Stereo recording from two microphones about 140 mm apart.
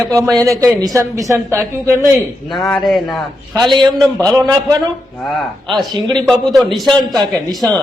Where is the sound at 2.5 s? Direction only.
Centre (ahead or behind).